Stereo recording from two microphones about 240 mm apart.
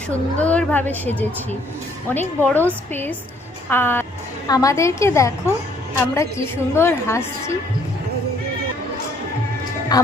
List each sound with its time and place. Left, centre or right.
0.1 s a woman's voice: centre
9.9 s a woman's voice: centre